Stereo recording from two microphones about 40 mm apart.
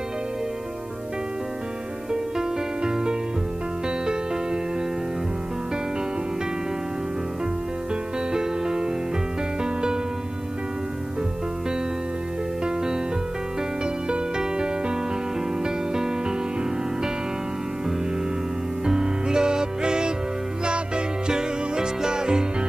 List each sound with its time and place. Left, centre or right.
2.3 s music: centre
7.9 s music: centre
12.6 s music: centre
14.0 s music: right
18.9 s music: centre